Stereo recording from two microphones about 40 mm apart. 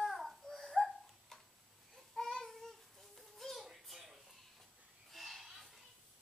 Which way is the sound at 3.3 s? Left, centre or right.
Centre.